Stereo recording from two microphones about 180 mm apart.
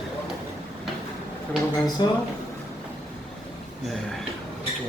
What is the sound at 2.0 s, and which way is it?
Speech, 25° left (ahead or behind).